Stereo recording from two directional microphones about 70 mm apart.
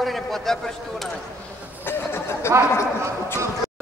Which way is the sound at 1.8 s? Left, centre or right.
Left.